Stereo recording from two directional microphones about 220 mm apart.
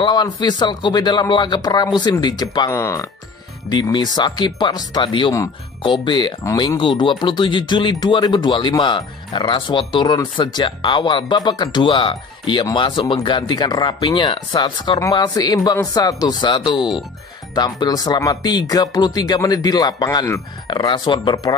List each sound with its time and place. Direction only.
0.0 s speech: 20° left (ahead or behind)